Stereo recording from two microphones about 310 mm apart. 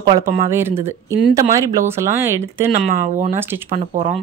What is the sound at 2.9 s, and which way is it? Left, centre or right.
Speech, right.